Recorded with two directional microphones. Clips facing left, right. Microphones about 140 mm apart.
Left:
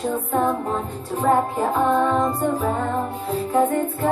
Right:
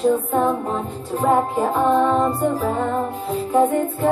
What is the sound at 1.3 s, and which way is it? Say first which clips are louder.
Music: right 1 dB; centre (ahead or behind).